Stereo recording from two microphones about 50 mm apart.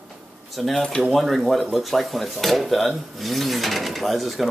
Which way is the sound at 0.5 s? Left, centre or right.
Centre.